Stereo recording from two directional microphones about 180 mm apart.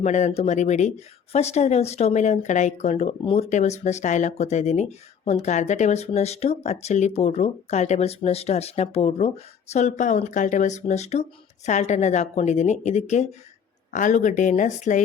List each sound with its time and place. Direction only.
0.0 s speech: 40° left (ahead or behind)